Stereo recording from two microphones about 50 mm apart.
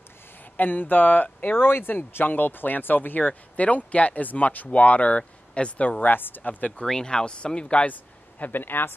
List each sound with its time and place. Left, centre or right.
0.6 s speech: left
6.9 s speech: centre
7.8 s speech: left